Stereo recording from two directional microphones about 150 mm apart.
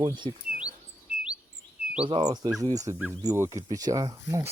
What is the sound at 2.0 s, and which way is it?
Speech, 35° right (ahead or behind).